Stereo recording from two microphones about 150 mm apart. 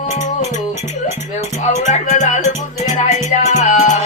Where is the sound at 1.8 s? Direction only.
50° left (ahead or behind).